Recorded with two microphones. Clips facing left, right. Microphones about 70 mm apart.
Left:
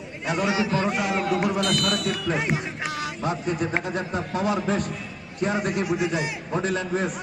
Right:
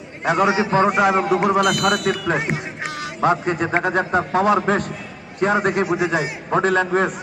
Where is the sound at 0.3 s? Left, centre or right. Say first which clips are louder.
Right 6 dB; right.